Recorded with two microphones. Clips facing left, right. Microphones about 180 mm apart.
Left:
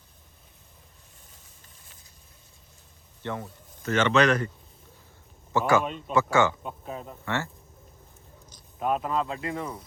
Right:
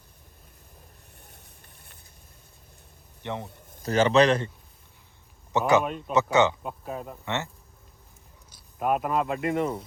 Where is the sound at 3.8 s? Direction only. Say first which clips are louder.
Right 2 dB; 35° right (ahead or behind).